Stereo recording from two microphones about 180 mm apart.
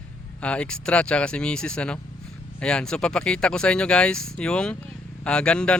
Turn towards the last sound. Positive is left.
turn(degrees=5)  # may be behind; listen again after turning